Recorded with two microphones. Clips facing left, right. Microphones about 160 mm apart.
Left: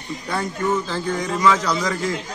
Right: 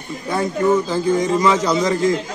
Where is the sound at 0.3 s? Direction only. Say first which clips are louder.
Right 6 dB; 20° right (ahead or behind).